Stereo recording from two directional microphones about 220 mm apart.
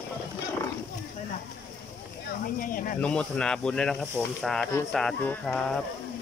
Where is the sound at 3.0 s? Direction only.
5° left (ahead or behind).